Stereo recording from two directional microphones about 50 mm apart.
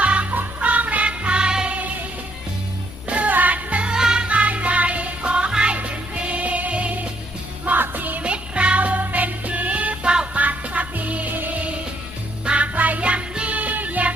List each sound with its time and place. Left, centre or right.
0.0 s music: right
3.1 s music: right; by 4.3 s centre
4.3 s music: right
7.6 s music: right
8.2 s music: right